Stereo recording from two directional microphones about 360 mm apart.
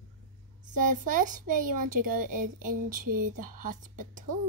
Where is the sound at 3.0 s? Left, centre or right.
Right.